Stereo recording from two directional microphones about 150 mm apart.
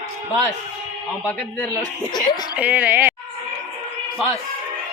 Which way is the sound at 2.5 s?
10° right (ahead or behind).